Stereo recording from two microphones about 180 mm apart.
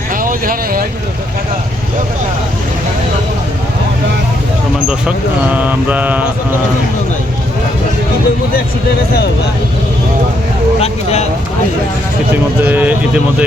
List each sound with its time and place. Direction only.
0.2 s speech: 50° right (ahead or behind)
4.9 s speech: 5° right (ahead or behind)
10.8 s speech: 35° left (ahead or behind)
12.6 s speech: 10° right (ahead or behind)